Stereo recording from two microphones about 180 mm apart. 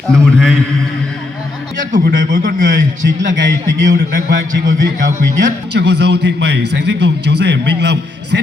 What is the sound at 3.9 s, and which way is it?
A man's voice, 50° right (ahead or behind).